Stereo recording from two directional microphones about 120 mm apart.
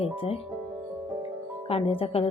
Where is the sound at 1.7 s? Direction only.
50° left (ahead or behind).